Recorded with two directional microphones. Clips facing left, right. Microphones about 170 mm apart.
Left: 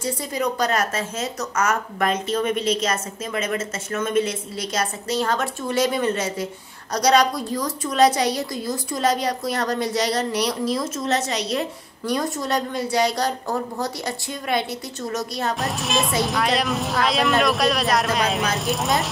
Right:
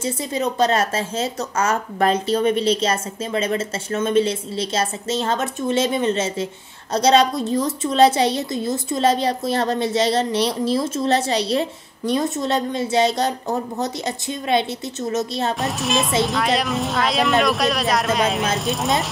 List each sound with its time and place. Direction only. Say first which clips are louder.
0.0 s a woman's voice: right 2 dB; 25° right (ahead or behind)
15.6 s speech: right 2 dB; centre (ahead or behind)